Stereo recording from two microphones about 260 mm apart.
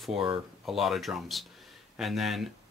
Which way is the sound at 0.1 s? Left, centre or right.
Centre.